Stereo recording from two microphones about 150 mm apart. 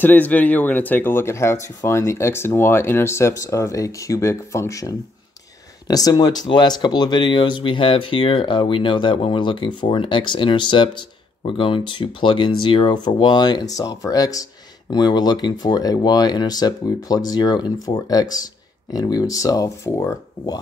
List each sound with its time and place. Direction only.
0.0 s speech: 10° left (ahead or behind)